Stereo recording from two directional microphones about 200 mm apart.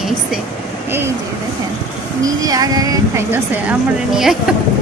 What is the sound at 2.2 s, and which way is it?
Speech, 20° right (ahead or behind).